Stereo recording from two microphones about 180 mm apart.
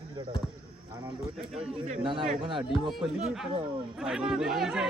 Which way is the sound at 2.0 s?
25° right (ahead or behind).